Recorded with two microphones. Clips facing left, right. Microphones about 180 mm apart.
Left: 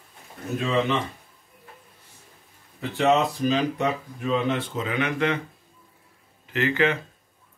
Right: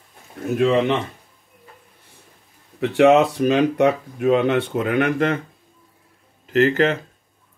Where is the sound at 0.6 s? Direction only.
65° right (ahead or behind).